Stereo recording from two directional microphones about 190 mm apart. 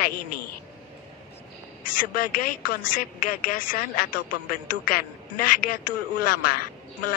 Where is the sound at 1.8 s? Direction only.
45° left (ahead or behind).